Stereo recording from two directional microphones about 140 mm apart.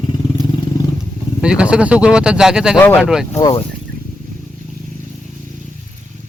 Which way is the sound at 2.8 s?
15° left (ahead or behind).